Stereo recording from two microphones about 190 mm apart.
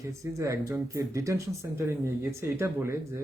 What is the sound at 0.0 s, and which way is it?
Speech, 15° right (ahead or behind).